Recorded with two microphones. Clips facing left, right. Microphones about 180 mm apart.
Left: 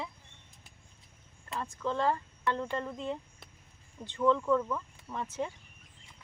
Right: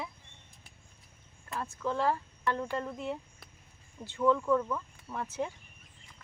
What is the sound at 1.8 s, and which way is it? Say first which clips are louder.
Speech: even; 10° right (ahead or behind).